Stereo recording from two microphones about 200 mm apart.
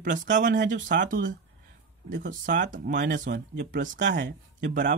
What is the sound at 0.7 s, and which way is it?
Speech, 40° right (ahead or behind).